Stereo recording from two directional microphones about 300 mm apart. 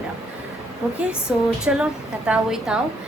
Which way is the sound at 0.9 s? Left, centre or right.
Centre.